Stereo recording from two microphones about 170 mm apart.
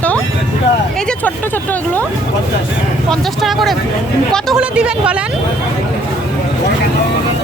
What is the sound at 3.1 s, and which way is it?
A woman's voice, centre (ahead or behind).